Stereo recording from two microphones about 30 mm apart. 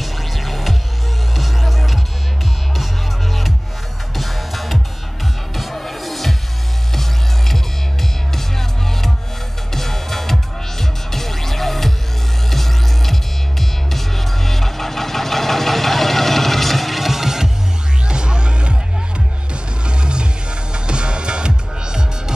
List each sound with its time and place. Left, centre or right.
0.0 s music: centre
4.2 s music: centre
18.0 s music: right
19.9 s music: right